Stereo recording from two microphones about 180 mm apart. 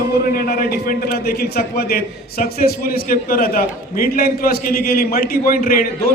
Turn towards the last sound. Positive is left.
turn(degrees=50)  # may be behind; listen again after turning